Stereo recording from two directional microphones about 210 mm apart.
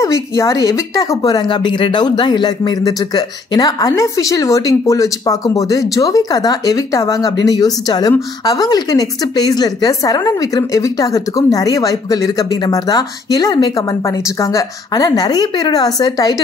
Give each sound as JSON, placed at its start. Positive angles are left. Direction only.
{"t": 0.0, "sound": "speech", "side_deg": 15}